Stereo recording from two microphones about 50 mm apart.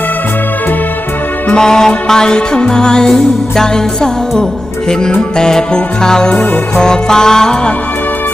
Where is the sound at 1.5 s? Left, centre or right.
Centre.